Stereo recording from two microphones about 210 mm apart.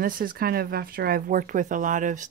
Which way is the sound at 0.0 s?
45° right (ahead or behind).